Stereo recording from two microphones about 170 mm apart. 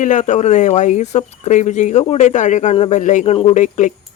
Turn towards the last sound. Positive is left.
turn(degrees=50)  # may be behind; listen again after turning